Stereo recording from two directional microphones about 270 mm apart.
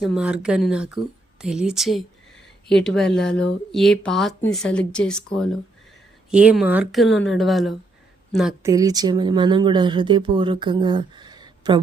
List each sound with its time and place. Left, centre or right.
0.0 s speech: centre
8.7 s speech: centre